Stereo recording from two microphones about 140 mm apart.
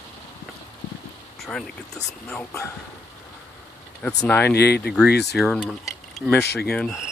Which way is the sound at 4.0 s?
5° left (ahead or behind).